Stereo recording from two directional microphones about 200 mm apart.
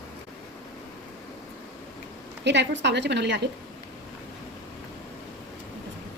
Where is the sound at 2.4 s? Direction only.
60° right (ahead or behind).